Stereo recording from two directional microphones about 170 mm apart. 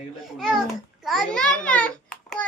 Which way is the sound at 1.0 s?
Centre (ahead or behind).